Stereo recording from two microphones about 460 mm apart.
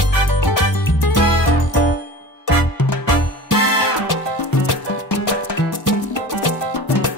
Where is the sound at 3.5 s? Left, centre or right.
Left.